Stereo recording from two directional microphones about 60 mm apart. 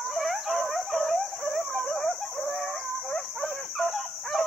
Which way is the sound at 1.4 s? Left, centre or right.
Right.